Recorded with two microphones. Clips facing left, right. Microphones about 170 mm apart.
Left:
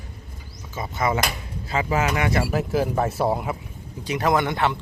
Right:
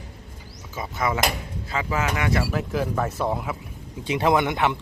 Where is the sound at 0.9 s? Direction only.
Centre (ahead or behind).